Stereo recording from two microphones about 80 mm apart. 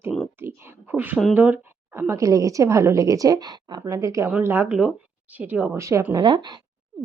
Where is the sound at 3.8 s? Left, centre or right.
Right.